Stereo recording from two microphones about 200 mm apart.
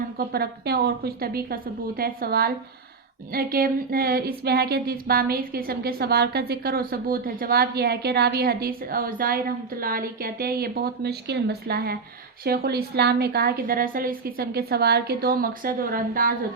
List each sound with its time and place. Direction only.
0.2 s speech: 50° right (ahead or behind)